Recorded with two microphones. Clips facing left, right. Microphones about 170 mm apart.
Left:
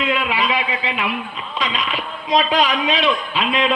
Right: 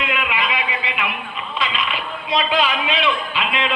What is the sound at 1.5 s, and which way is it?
Speech, 40° left (ahead or behind).